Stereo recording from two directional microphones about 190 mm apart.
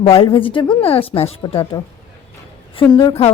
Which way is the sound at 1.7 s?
20° left (ahead or behind).